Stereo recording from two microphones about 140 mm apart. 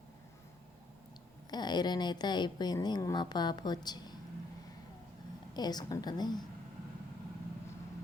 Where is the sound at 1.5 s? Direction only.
30° left (ahead or behind).